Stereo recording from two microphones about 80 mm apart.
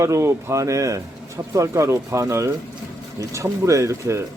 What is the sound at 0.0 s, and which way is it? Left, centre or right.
Speech, right.